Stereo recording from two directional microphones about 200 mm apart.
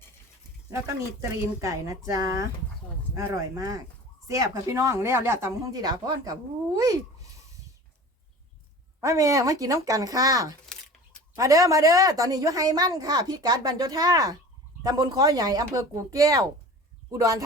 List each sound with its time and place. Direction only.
1.2 s a woman's voice: 15° right (ahead or behind)
9.0 s a woman's voice: 15° right (ahead or behind)